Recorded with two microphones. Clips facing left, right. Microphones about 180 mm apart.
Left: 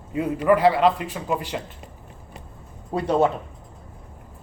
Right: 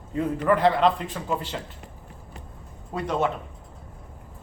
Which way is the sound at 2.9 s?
35° left (ahead or behind).